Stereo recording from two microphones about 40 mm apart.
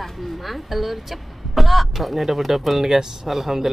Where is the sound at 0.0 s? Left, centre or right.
Centre.